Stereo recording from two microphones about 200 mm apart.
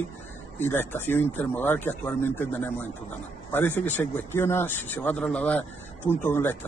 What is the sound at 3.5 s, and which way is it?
Speech, 10° left (ahead or behind).